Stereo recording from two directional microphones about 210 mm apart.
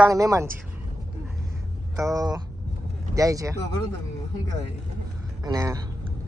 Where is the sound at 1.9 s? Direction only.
15° right (ahead or behind).